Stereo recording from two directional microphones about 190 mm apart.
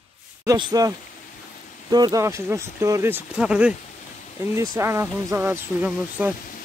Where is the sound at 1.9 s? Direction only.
20° right (ahead or behind).